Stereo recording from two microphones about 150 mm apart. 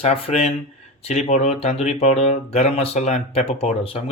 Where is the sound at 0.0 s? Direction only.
45° left (ahead or behind).